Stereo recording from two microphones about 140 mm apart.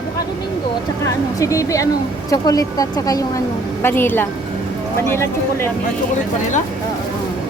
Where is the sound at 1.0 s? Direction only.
20° left (ahead or behind).